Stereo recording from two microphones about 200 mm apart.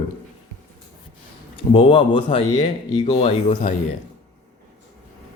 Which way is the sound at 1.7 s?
25° left (ahead or behind).